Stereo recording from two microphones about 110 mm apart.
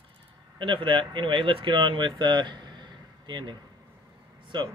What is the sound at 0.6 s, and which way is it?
Speech, 50° right (ahead or behind).